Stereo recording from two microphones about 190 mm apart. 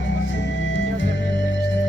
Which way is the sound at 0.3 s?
75° left (ahead or behind).